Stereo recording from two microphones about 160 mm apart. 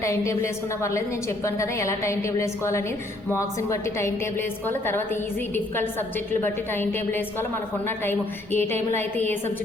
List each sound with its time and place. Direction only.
0.0 s a woman's voice: 20° left (ahead or behind)